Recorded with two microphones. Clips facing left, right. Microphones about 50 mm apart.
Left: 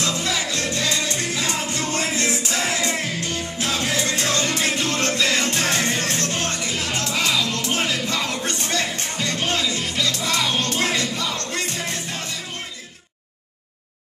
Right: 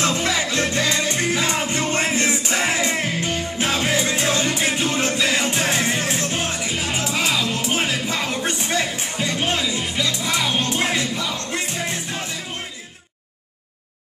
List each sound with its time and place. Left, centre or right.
0.0 s music: right; by 12.3 s centre